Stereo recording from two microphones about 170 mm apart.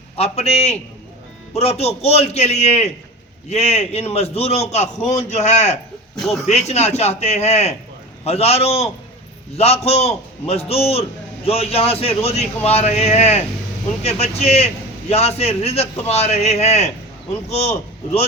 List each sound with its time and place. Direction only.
0.2 s a man's voice: 35° left (ahead or behind)
6.1 s speech: centre (ahead or behind)
6.5 s a man's voice: 40° left (ahead or behind)